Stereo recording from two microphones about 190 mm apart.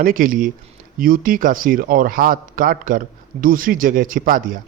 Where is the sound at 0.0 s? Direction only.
45° right (ahead or behind).